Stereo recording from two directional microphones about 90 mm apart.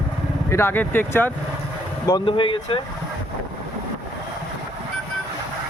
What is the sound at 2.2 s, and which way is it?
Speech, 75° left (ahead or behind).